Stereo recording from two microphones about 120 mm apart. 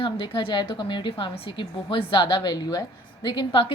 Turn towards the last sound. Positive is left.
turn(degrees=40)  # may be behind; listen again after turning